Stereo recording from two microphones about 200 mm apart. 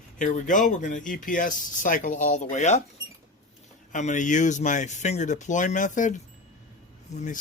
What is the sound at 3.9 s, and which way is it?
Speech, 40° left (ahead or behind).